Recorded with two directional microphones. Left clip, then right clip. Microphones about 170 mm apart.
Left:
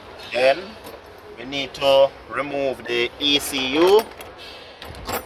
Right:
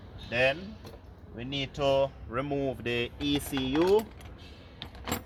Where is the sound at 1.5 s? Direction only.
25° right (ahead or behind).